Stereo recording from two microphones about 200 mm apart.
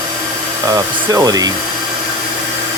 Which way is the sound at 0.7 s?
20° right (ahead or behind).